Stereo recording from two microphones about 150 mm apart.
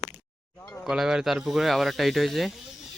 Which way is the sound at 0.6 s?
15° left (ahead or behind).